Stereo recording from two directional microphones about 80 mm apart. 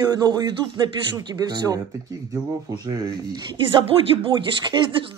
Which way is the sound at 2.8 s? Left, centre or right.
Right.